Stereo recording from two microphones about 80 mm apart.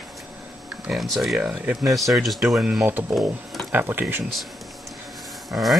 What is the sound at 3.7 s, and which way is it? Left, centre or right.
Speech, right.